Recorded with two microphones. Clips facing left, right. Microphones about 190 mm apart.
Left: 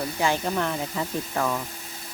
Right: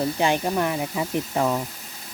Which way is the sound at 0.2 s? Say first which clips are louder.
Even; 15° right (ahead or behind).